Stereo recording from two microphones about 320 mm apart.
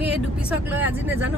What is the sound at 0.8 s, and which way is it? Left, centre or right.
Speech, centre.